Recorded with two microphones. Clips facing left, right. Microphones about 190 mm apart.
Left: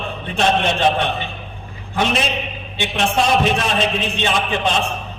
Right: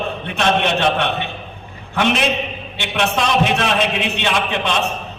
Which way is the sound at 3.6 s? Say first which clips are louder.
Right 1 dB; 65° right (ahead or behind).